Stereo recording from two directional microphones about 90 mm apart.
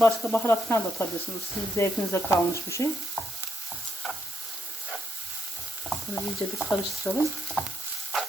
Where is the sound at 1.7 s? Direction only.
30° left (ahead or behind).